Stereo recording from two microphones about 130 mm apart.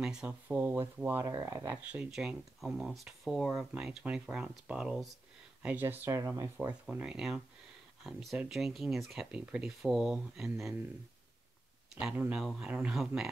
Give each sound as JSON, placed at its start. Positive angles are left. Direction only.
{"t": 0.0, "sound": "speech", "side_deg": -5}
{"t": 6.9, "sound": "speech", "side_deg": -5}
{"t": 11.9, "sound": "speech", "side_deg": -5}